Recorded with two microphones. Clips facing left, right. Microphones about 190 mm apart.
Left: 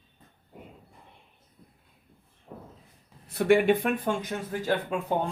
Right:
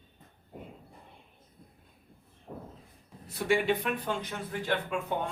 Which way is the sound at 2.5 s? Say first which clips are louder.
Right 1 dB; 40° right (ahead or behind).